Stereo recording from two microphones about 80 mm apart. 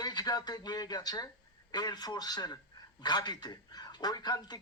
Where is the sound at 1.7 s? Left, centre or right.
Left.